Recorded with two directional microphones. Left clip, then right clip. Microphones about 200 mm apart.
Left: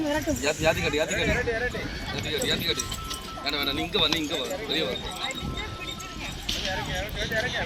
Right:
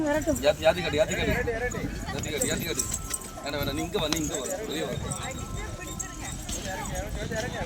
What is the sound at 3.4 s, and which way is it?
Speech, 70° right (ahead or behind).